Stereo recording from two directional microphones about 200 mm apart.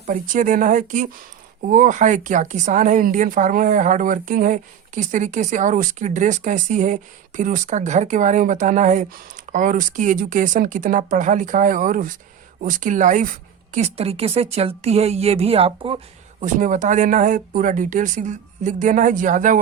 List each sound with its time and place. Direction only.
0.0 s speech: 40° right (ahead or behind)
16.4 s speech: 40° right (ahead or behind)